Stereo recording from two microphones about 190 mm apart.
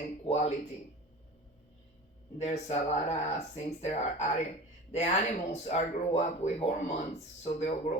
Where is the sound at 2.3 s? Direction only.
35° left (ahead or behind).